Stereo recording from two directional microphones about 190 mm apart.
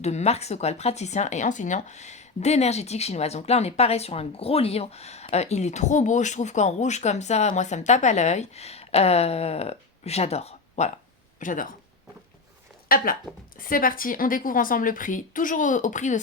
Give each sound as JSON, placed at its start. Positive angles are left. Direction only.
{"t": 0.0, "sound": "speech", "side_deg": 35}
{"t": 12.9, "sound": "a woman's voice", "side_deg": 50}